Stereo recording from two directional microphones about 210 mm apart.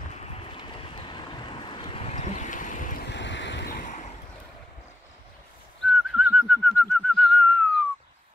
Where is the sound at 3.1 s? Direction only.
60° left (ahead or behind); by 4.1 s 35° left (ahead or behind).